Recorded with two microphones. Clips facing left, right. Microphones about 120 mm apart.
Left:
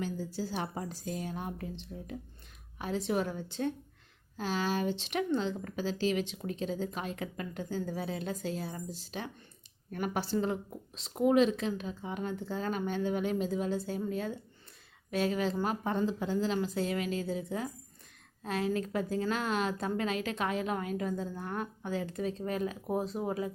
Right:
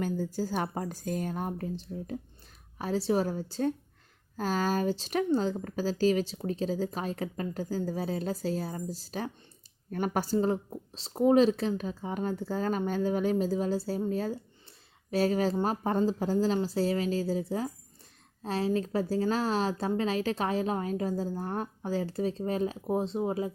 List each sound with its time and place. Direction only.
0.0 s a woman's voice: 50° right (ahead or behind); by 23.5 s 25° right (ahead or behind)